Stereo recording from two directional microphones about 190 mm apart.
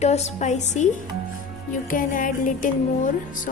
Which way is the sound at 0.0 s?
35° left (ahead or behind).